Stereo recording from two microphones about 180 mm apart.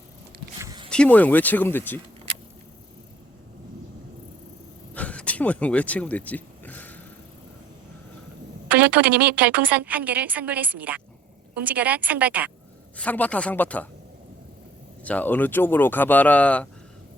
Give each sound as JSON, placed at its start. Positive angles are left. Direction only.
{"t": 0.6, "sound": "zipper", "side_deg": -20}
{"t": 0.9, "sound": "speech", "side_deg": 5}
{"t": 4.9, "sound": "vehicle", "side_deg": 5}
{"t": 8.6, "sound": "a woman's voice", "side_deg": -10}
{"t": 13.0, "sound": "speech", "side_deg": 10}
{"t": 15.0, "sound": "speech", "side_deg": 10}